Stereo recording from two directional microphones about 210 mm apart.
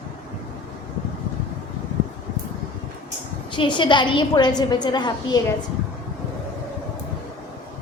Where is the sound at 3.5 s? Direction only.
20° left (ahead or behind).